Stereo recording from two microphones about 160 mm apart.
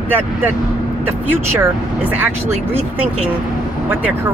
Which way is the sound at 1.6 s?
10° right (ahead or behind).